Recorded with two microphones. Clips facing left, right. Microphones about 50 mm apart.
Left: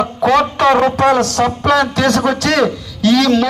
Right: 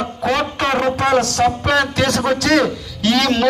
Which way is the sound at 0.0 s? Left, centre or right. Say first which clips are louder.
Left 6 dB; left.